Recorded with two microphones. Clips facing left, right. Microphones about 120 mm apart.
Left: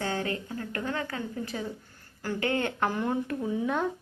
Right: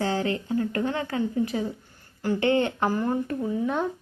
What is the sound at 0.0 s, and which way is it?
Speech, 25° right (ahead or behind).